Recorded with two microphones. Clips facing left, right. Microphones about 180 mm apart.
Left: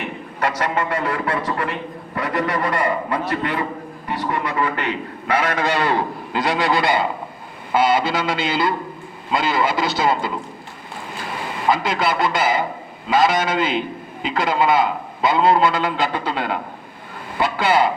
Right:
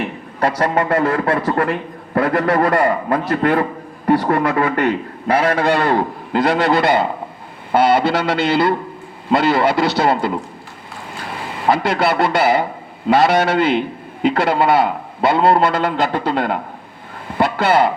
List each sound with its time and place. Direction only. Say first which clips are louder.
0.3 s a man's voice: right 5 dB; 35° right (ahead or behind)
5.3 s a man's voice: right 5 dB; 30° right (ahead or behind)
5.6 s a man's voice: right 4 dB; 50° right (ahead or behind)
11.7 s a man's voice: right 4 dB; 60° right (ahead or behind)